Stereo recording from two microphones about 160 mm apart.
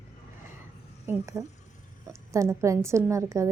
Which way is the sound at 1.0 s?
15° right (ahead or behind).